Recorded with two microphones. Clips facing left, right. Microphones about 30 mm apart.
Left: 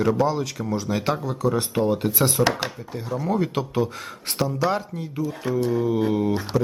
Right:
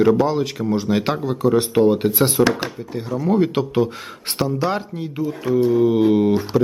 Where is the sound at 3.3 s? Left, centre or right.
Right.